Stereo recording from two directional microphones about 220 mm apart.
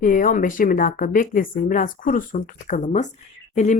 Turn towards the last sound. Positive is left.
turn(degrees=30)  # may be behind; listen again after turning